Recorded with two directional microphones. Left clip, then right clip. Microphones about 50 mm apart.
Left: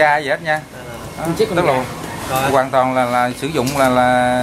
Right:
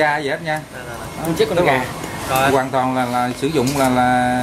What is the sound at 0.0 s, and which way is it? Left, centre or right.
Speech, left.